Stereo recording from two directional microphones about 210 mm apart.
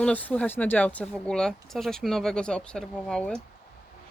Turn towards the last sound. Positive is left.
turn(degrees=5)  # may be behind; listen again after turning